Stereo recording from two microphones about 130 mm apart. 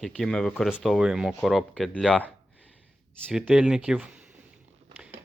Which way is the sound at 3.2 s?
10° right (ahead or behind).